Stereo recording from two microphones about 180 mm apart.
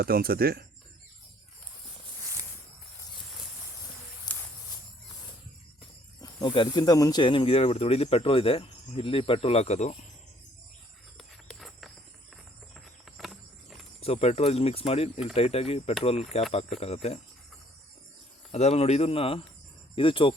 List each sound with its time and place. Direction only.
0.0 s speech: 55° right (ahead or behind)
4.3 s a sound: 25° left (ahead or behind)
6.2 s speech: 25° left (ahead or behind)
11.2 s a sound: centre (ahead or behind)
12.7 s insect: centre (ahead or behind)
14.0 s speech: 35° left (ahead or behind)
18.5 s speech: 35° left (ahead or behind)